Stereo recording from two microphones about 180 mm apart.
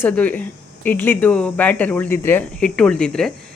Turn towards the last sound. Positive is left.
turn(degrees=5)  # may be behind; listen again after turning